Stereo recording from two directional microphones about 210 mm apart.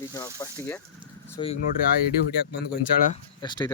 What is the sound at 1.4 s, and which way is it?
Speech, 25° left (ahead or behind).